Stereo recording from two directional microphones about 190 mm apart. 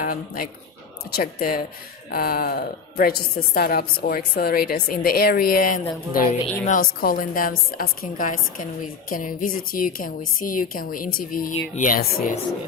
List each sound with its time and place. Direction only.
0.0 s a woman's voice: 45° left (ahead or behind)